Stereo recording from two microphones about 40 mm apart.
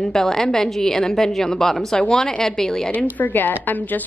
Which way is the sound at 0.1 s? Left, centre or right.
Centre.